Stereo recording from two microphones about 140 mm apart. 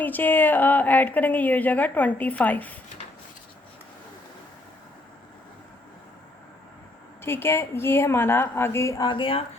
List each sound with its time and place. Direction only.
0.0 s a woman's voice: 15° left (ahead or behind)
7.2 s a woman's voice: 15° left (ahead or behind)
9.0 s speech: 40° left (ahead or behind)